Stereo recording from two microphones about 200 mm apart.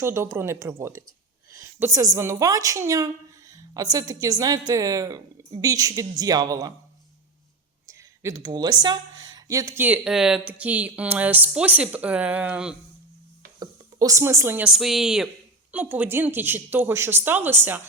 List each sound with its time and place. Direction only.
0.0 s a woman's voice: 15° right (ahead or behind)
7.9 s a woman's voice: 15° right (ahead or behind)
13.6 s a woman's voice: 15° right (ahead or behind)